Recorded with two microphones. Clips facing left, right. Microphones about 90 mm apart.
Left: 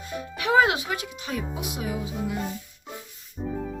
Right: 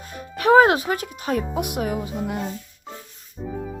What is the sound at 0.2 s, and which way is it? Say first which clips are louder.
A child's voice: right 6 dB; 45° right (ahead or behind).